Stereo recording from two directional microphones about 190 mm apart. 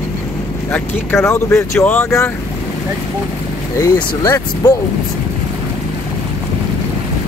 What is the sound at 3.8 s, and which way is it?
Speech, 20° left (ahead or behind).